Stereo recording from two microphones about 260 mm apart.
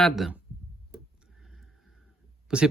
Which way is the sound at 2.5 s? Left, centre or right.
Centre.